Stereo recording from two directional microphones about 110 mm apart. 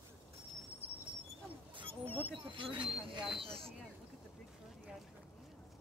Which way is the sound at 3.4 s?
60° right (ahead or behind).